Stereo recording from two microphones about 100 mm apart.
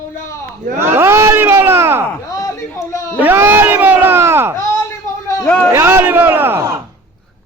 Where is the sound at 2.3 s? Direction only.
35° left (ahead or behind).